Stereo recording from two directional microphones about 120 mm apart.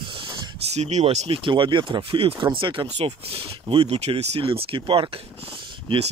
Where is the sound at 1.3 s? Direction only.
45° right (ahead or behind).